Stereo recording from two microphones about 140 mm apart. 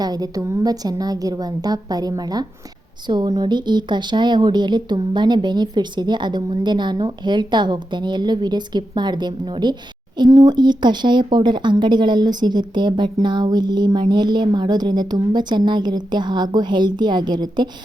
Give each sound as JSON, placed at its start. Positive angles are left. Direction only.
{"t": 0.0, "sound": "a woman's voice", "side_deg": -30}